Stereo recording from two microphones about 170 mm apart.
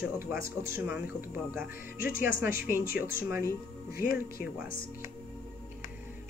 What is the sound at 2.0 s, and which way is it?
Speech, 55° left (ahead or behind).